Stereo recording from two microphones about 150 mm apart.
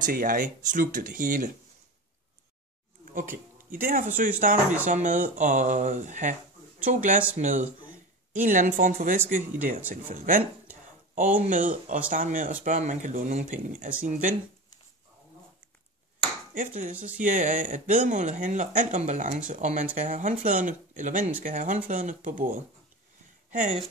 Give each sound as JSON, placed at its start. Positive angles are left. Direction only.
{"t": 0.0, "sound": "speech", "side_deg": -65}
{"t": 3.1, "sound": "a sound", "side_deg": -60}
{"t": 4.2, "sound": "speech", "side_deg": -65}
{"t": 16.5, "sound": "speech", "side_deg": -60}
{"t": 23.5, "sound": "speech", "side_deg": -50}